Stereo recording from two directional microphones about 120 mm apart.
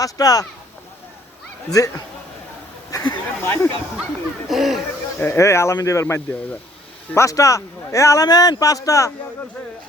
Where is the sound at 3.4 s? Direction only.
20° left (ahead or behind).